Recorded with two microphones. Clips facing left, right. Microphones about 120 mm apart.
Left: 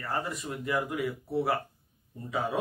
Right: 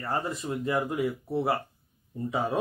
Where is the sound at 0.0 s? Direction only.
25° right (ahead or behind).